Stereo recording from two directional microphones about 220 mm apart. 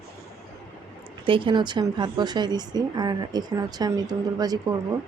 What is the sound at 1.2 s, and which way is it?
Speech, 25° right (ahead or behind).